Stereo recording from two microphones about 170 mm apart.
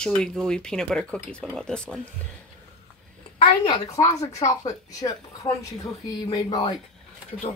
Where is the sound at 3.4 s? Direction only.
30° left (ahead or behind).